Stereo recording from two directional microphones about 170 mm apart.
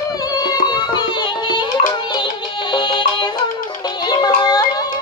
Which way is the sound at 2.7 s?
25° left (ahead or behind).